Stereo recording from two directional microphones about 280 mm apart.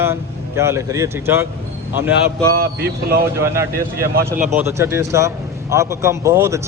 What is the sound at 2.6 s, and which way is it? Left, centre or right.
Speech, right.